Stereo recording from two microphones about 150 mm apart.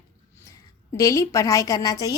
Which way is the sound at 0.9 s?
20° left (ahead or behind).